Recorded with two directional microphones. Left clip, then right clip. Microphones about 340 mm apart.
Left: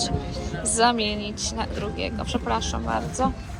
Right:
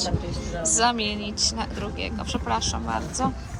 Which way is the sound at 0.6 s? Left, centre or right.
Centre.